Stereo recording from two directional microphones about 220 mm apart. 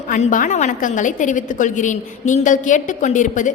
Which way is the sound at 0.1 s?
35° left (ahead or behind).